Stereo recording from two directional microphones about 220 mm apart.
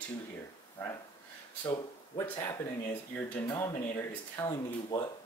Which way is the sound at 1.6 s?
20° left (ahead or behind).